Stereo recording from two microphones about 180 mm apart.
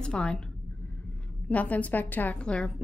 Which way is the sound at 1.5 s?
10° left (ahead or behind).